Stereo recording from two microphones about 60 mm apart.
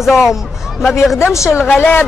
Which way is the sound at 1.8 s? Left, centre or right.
Left.